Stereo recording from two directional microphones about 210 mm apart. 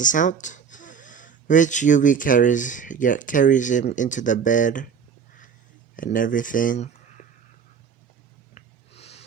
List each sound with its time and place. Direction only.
0.0 s speech: 40° left (ahead or behind)
6.0 s speech: 40° left (ahead or behind)
8.5 s snort: 30° left (ahead or behind)